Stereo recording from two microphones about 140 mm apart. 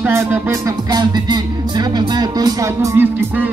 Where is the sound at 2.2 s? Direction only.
30° right (ahead or behind).